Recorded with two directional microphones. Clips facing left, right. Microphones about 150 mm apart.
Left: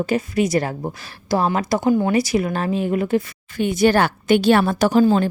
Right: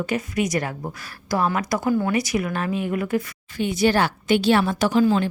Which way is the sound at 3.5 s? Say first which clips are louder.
Left 3 dB; 50° left (ahead or behind).